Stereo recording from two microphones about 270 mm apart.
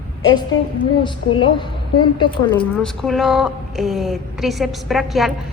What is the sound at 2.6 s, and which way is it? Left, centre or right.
Speech, centre.